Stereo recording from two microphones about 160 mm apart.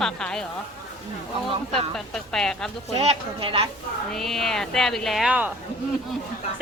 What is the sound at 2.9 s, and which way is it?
Speech, 35° right (ahead or behind).